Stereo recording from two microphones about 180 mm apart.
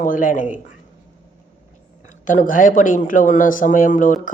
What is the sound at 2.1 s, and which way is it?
Speech, 45° left (ahead or behind).